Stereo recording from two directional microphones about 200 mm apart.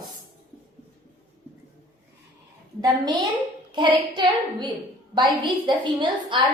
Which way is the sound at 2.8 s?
20° right (ahead or behind).